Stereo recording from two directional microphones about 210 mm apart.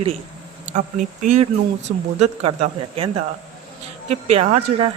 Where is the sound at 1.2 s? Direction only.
35° right (ahead or behind).